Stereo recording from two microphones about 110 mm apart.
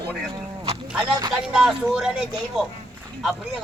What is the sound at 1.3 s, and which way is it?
A man's voice, 5° right (ahead or behind).